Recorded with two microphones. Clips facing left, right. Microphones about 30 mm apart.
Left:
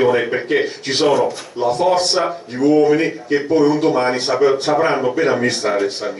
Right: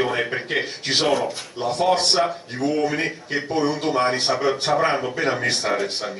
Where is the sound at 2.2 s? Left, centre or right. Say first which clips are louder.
Left 5 dB; centre.